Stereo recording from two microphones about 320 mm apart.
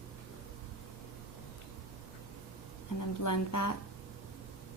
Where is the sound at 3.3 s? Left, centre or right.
Left.